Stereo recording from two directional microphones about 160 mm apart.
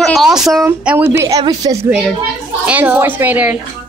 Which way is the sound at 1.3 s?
25° right (ahead or behind).